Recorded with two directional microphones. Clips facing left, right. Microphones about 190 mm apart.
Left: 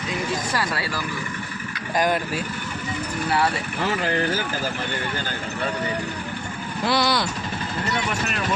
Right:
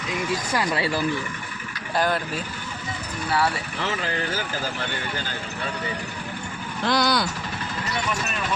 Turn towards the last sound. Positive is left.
turn(degrees=0)  # may be behind; listen again after turning